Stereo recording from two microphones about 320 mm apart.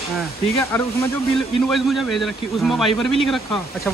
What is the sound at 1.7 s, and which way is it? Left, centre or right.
Speech, centre.